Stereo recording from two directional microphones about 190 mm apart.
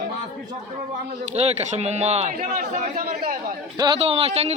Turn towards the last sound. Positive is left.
turn(degrees=-35)  # may be behind; listen again after turning